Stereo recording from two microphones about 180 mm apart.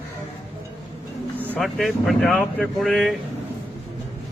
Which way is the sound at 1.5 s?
Centre (ahead or behind).